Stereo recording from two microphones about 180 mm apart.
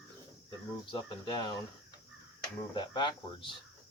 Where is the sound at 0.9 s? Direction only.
25° left (ahead or behind).